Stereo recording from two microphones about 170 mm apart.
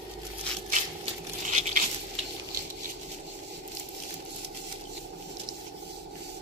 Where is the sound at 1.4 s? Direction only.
45° right (ahead or behind).